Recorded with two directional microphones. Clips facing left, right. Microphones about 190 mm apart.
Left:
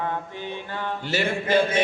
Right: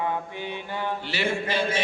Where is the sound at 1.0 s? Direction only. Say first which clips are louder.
Left 6 dB; 45° left (ahead or behind).